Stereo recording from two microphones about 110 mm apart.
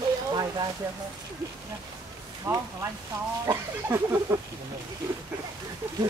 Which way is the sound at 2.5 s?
20° right (ahead or behind).